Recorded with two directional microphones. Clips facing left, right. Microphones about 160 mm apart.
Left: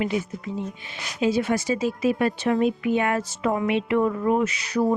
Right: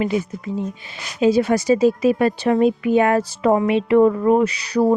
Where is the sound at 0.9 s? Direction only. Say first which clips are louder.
Right 7 dB; 35° right (ahead or behind).